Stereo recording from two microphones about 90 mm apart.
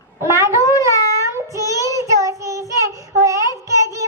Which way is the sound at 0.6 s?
35° left (ahead or behind).